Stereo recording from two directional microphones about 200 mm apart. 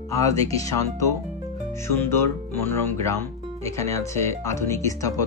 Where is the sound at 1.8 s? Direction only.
15° left (ahead or behind).